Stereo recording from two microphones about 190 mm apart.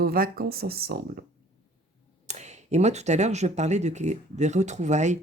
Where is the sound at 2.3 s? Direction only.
35° right (ahead or behind).